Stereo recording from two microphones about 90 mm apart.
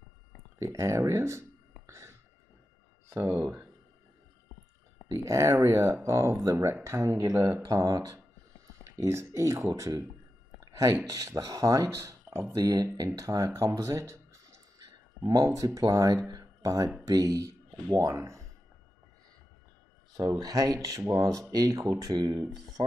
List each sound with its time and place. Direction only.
0.6 s speech: 35° right (ahead or behind)
1.9 s a sound: 35° right (ahead or behind)
3.1 s speech: 25° right (ahead or behind)
5.1 s speech: 35° right (ahead or behind)
10.6 s a sound: 40° right (ahead or behind)
11.1 s speech: 40° right (ahead or behind)
20.2 s speech: 45° right (ahead or behind)